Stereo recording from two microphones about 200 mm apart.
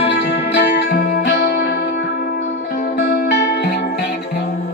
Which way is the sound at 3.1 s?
55° left (ahead or behind).